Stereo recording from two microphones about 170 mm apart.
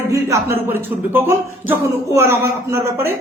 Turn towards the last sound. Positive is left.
turn(degrees=-15)  # may be behind; listen again after turning